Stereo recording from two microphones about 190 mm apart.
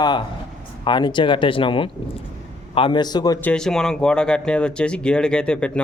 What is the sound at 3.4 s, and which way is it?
Speech, 5° left (ahead or behind).